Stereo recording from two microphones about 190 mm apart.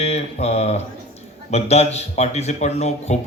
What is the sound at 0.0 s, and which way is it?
A man's voice, 35° left (ahead or behind).